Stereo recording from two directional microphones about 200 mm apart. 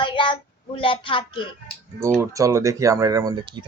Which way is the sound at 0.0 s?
25° left (ahead or behind).